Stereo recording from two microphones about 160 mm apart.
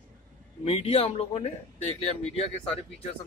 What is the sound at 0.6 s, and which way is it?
Speech, 40° left (ahead or behind).